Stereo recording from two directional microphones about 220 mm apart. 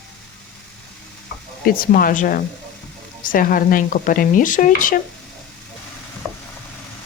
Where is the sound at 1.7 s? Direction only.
40° left (ahead or behind).